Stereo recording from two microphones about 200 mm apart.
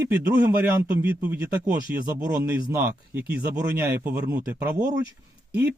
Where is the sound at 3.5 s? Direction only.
15° right (ahead or behind).